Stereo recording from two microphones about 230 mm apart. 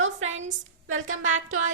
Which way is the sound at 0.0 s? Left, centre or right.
Right.